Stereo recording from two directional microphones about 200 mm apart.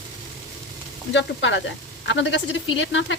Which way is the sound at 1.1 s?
65° left (ahead or behind).